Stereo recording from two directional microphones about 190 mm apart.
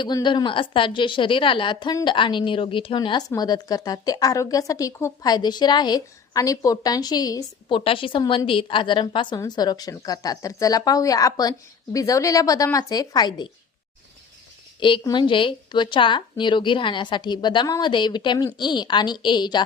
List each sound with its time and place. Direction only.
0.0 s a woman's voice: 25° left (ahead or behind)
14.8 s a woman's voice: 25° left (ahead or behind)